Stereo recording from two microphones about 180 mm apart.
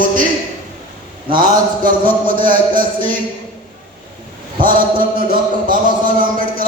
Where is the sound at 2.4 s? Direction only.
50° right (ahead or behind).